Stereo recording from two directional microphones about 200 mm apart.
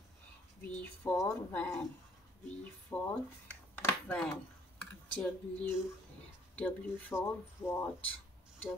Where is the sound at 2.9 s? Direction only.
20° left (ahead or behind).